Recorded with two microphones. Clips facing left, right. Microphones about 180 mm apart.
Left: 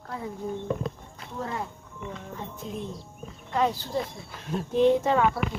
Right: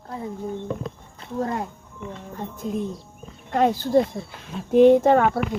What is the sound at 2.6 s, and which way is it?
Speech, 45° right (ahead or behind).